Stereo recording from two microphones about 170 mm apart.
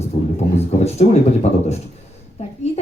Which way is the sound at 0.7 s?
40° left (ahead or behind).